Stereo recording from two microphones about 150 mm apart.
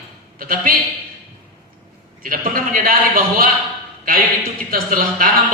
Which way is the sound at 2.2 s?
70° right (ahead or behind).